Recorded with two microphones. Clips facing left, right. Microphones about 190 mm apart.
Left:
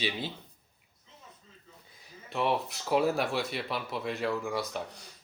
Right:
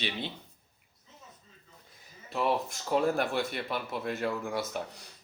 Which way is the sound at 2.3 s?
Centre (ahead or behind).